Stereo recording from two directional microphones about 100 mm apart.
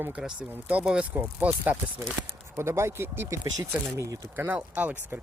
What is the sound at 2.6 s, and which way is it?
Speech, 25° right (ahead or behind).